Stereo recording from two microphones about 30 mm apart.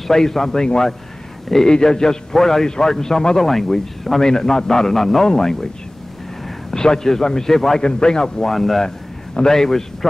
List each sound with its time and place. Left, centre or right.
0.1 s a man's voice: centre
3.3 s a man's voice: centre
6.7 s a man's voice: centre
7.8 s a man's voice: left
8.5 s a man's voice: centre
8.8 s a sound: left
9.6 s a man's voice: centre